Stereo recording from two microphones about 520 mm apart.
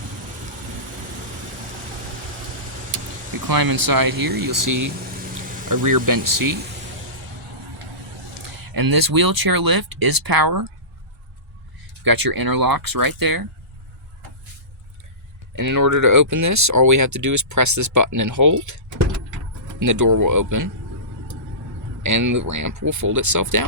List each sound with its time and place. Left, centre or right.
3.4 s speech: right
8.4 s speech: right
12.0 s speech: right
15.5 s speech: right
22.0 s speech: right